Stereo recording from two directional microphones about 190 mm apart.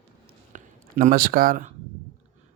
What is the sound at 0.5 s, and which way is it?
Speech, 45° right (ahead or behind).